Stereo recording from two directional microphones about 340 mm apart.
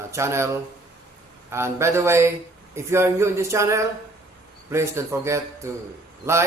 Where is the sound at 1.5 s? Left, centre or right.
Centre.